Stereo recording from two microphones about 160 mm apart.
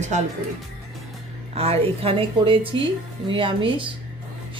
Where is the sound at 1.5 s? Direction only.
40° right (ahead or behind).